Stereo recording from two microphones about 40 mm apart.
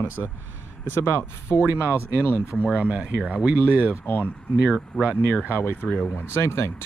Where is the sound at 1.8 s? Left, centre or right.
Right.